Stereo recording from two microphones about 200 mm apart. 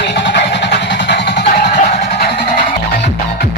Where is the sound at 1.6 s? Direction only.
35° left (ahead or behind).